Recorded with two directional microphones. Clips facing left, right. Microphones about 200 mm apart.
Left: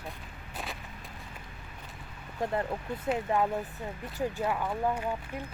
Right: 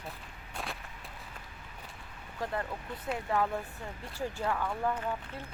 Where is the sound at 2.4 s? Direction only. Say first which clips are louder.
Left 5 dB; 20° left (ahead or behind).